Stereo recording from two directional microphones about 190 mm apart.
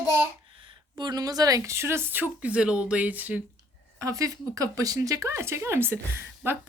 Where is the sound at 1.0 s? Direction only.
20° right (ahead or behind).